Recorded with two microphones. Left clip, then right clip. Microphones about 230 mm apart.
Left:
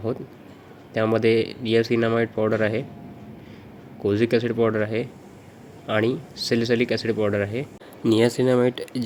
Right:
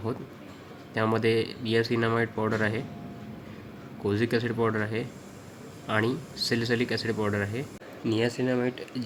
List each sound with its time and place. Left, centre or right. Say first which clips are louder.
0.9 s speech: left 5 dB; centre
4.0 s speech: left 6 dB; centre
8.0 s speech: left 8 dB; left